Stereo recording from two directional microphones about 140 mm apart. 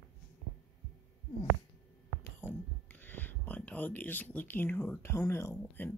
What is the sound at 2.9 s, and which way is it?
Speech, 15° left (ahead or behind).